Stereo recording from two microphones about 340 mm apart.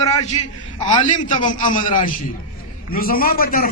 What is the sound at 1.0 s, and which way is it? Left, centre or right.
A man's voice, left.